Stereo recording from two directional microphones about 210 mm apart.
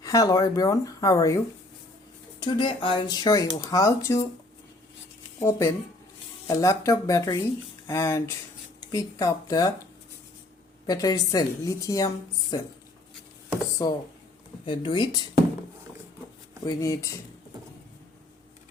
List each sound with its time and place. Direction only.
0.0 s a woman's voice: 15° left (ahead or behind)
2.4 s speech: 20° left (ahead or behind)
5.4 s a woman's voice: 10° left (ahead or behind)
10.8 s a woman's voice: 15° left (ahead or behind)
13.8 s a woman's voice: 15° left (ahead or behind)
14.6 s speech: 25° left (ahead or behind)
16.6 s a woman's voice: 15° left (ahead or behind)